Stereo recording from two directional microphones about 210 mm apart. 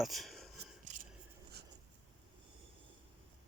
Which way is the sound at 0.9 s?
35° right (ahead or behind).